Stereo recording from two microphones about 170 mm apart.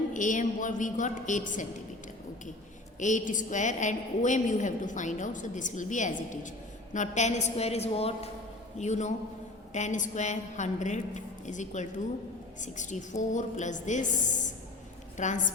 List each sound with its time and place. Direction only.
0.1 s a woman's voice: 50° left (ahead or behind)
3.0 s a woman's voice: 45° left (ahead or behind)